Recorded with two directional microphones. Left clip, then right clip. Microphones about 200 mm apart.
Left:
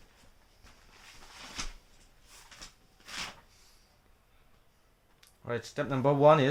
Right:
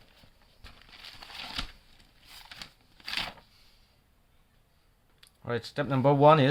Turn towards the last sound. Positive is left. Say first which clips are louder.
# right 2 dB
turn(degrees=-25)  # may be behind; listen again after turning